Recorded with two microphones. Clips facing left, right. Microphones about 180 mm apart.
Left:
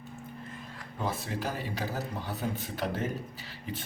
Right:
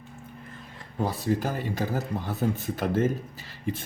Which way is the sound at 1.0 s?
40° right (ahead or behind).